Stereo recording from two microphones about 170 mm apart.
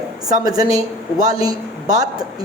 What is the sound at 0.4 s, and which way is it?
A woman's voice, 20° right (ahead or behind).